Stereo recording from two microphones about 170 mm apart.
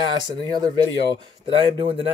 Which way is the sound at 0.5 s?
25° right (ahead or behind).